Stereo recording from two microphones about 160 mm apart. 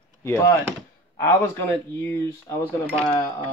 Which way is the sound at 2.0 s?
15° left (ahead or behind).